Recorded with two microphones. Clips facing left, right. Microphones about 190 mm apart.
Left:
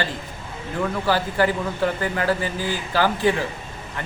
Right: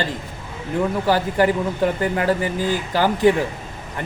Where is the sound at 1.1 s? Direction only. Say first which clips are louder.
Right 3 dB; 20° right (ahead or behind).